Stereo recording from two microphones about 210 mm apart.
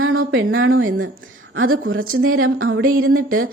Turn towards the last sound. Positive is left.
turn(degrees=-85)